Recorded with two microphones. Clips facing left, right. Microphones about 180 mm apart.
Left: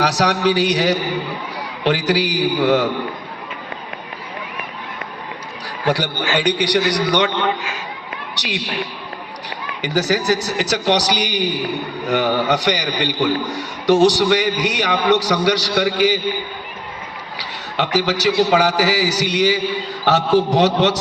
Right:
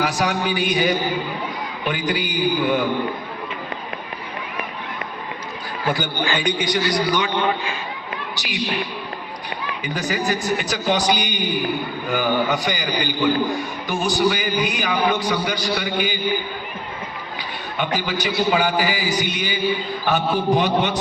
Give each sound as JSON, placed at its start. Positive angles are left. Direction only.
{"t": 0.0, "sound": "a man's voice", "side_deg": 80}
{"t": 5.8, "sound": "a man's voice", "side_deg": 75}
{"t": 8.4, "sound": "a man's voice", "side_deg": 75}
{"t": 9.8, "sound": "a man's voice", "side_deg": 80}
{"t": 17.3, "sound": "a man's voice", "side_deg": 85}